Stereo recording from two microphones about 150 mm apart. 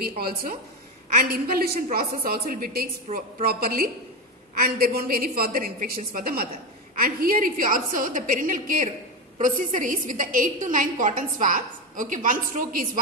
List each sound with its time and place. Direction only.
0.2 s a woman's voice: 85° right; by 13.0 s 65° right (ahead or behind)